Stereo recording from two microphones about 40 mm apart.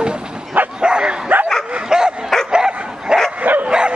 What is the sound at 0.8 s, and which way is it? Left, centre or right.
Bow-wow, right.